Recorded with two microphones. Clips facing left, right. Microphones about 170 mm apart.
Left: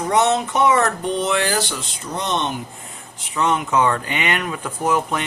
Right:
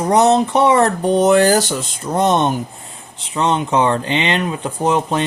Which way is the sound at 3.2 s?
30° right (ahead or behind).